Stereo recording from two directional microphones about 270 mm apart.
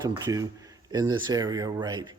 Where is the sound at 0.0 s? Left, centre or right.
Centre.